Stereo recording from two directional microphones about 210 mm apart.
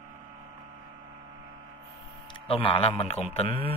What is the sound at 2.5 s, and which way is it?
A man's voice, 25° left (ahead or behind).